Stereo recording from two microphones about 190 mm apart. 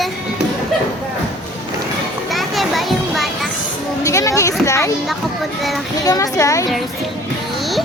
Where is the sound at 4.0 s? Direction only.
15° left (ahead or behind).